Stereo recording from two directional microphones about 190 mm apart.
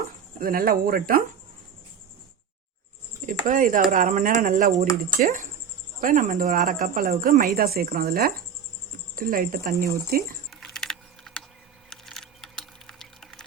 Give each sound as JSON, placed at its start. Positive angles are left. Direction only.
{"t": 0.3, "sound": "a woman's voice", "side_deg": -50}
{"t": 3.2, "sound": "a woman's voice", "side_deg": -45}
{"t": 10.5, "sound": "a sound", "side_deg": 0}